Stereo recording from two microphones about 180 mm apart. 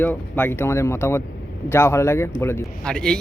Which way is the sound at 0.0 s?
10° left (ahead or behind).